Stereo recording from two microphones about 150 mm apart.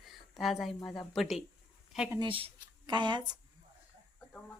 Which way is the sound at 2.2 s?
35° right (ahead or behind).